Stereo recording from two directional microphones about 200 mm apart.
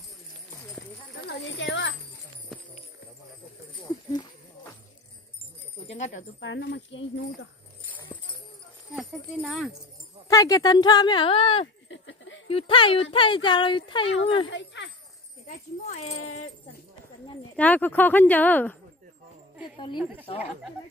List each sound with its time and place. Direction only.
1.2 s clip-clop: 60° left (ahead or behind)
5.9 s a sound: 35° left (ahead or behind)
6.1 s speech: 65° left (ahead or behind)
8.9 s speech: centre (ahead or behind)
10.2 s speech: 15° left (ahead or behind)
11.6 s a sound: 70° left (ahead or behind)
12.4 s speech: 25° left (ahead or behind)
14.5 s jingle bell: 65° left (ahead or behind)
15.4 s speech: 35° left (ahead or behind)
17.6 s speech: 10° left (ahead or behind)
20.0 s a woman's voice: 10° right (ahead or behind)